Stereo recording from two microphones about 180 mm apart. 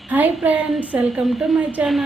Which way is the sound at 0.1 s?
10° right (ahead or behind).